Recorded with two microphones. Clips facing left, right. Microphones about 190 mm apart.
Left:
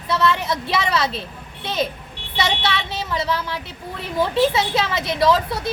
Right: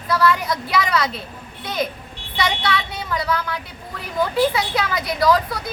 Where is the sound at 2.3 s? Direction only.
25° left (ahead or behind).